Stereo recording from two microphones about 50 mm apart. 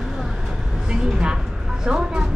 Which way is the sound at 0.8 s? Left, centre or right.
Centre.